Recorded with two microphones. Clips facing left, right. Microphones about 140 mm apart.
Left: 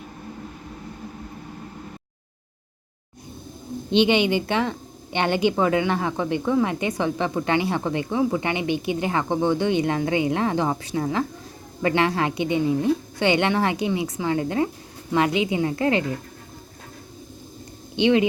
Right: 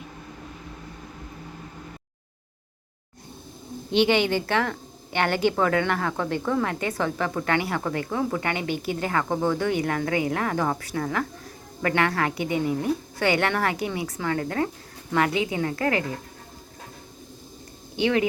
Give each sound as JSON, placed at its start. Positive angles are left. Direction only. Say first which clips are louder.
{"t": 3.9, "sound": "speech", "louder": "left 2 dB", "side_deg": 20}
{"t": 17.9, "sound": "speech", "louder": "left 4 dB", "side_deg": 20}